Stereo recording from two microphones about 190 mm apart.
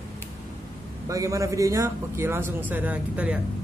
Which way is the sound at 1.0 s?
15° right (ahead or behind).